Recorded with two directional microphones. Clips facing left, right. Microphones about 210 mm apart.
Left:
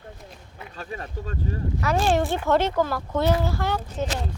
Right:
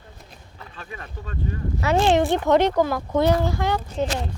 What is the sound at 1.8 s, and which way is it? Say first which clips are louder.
Speech: right 4 dB; 25° right (ahead or behind).